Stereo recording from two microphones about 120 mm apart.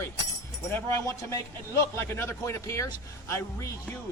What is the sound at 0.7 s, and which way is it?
A man's voice, 25° left (ahead or behind).